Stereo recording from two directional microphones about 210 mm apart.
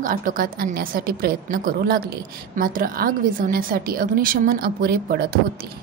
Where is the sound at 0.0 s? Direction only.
40° right (ahead or behind).